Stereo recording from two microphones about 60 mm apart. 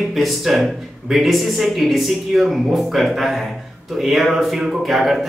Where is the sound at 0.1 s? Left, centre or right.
Centre.